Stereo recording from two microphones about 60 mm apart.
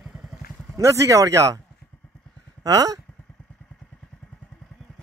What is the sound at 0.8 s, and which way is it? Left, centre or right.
Speech, right.